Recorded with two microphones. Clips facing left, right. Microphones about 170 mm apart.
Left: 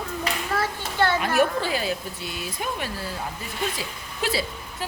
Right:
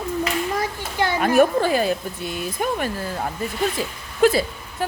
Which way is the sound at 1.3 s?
50° right (ahead or behind).